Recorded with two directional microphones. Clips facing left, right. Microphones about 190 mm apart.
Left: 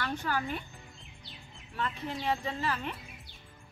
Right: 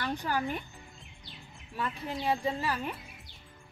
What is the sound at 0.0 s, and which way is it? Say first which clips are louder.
Speech: right 1 dB; 15° right (ahead or behind).